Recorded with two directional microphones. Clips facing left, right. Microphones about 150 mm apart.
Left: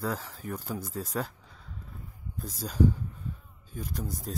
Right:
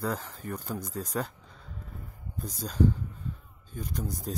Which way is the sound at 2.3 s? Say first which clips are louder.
Even; centre (ahead or behind).